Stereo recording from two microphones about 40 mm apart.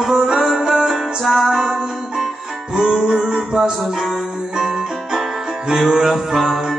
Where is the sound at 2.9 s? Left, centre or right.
Centre.